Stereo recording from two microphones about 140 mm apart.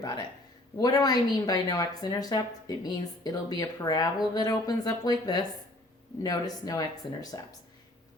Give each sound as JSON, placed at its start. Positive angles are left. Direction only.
{"t": 0.0, "sound": "a woman's voice", "side_deg": 30}